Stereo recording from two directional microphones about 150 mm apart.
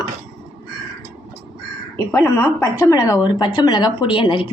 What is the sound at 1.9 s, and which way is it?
A woman's voice, 20° left (ahead or behind).